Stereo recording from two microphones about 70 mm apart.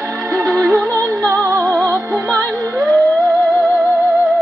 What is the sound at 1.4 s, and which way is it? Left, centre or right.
Music, right.